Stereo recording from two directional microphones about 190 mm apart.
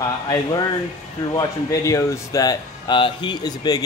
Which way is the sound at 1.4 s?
15° left (ahead or behind).